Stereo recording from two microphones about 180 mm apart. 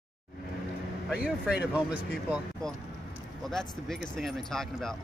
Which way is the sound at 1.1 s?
5° right (ahead or behind).